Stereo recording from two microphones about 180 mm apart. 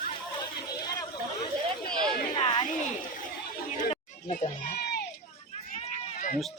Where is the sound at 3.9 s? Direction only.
40° left (ahead or behind); by 5.0 s 60° left (ahead or behind).